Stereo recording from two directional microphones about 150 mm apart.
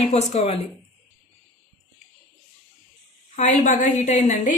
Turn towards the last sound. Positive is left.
turn(degrees=55)  # may be behind; listen again after turning